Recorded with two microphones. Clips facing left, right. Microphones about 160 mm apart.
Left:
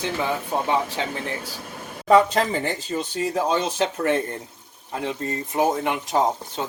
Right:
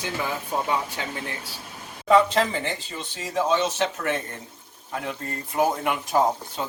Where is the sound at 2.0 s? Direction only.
40° left (ahead or behind).